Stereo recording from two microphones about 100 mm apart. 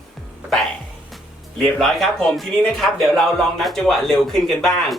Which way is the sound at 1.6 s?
5° left (ahead or behind).